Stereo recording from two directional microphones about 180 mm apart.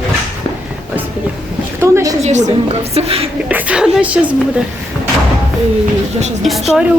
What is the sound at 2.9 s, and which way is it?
Speech, 35° right (ahead or behind).